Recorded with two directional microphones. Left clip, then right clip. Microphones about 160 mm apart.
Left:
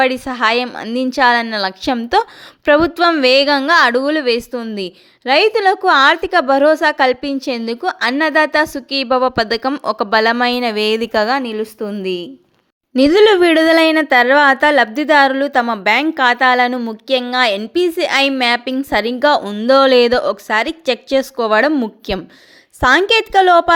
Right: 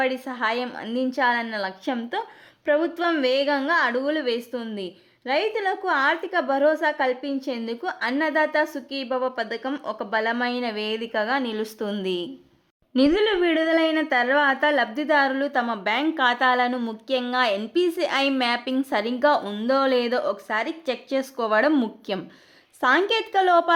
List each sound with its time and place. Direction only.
0.0 s a woman's voice: 30° left (ahead or behind)
11.8 s speech: 15° left (ahead or behind)
13.0 s a woman's voice: 40° left (ahead or behind)
19.6 s a woman's voice: 35° left (ahead or behind)